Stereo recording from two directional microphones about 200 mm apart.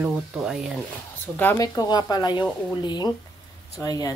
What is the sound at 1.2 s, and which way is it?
Speech, 10° left (ahead or behind).